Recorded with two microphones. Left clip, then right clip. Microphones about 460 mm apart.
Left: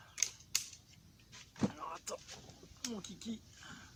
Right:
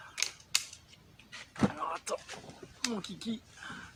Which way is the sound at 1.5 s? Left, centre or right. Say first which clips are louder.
Right 8 dB; right.